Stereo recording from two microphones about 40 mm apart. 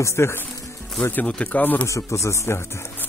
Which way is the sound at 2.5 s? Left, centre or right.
Left.